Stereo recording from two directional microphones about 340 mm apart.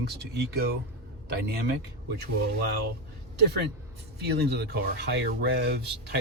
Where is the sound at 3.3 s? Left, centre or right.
Right.